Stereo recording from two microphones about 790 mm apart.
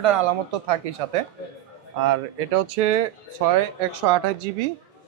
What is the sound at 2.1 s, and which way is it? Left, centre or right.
Speech, right.